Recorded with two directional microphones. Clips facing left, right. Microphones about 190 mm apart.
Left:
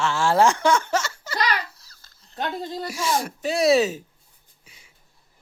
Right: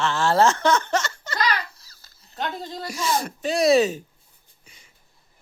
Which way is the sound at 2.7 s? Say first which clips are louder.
Even; 5° left (ahead or behind).